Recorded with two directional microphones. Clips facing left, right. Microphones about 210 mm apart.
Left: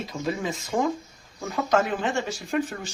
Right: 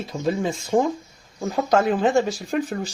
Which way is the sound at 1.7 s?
35° right (ahead or behind).